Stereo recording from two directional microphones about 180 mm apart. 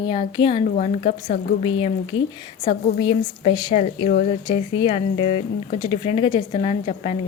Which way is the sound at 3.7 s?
45° left (ahead or behind).